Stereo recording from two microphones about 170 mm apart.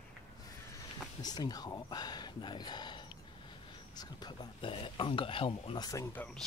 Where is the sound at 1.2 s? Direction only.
25° left (ahead or behind).